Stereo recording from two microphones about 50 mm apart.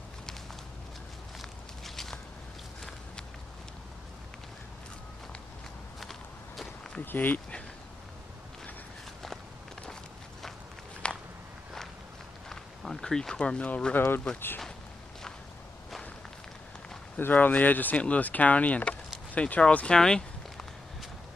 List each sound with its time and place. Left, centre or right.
1.4 s walk: centre
5.9 s walk: centre
7.1 s speech: left
11.0 s walk: left
12.4 s a sound: centre
13.7 s speech: left
13.9 s speech: left
17.3 s speech: left
20.0 s a sound: centre